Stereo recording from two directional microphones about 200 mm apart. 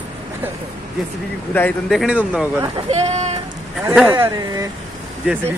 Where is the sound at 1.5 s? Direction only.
10° left (ahead or behind).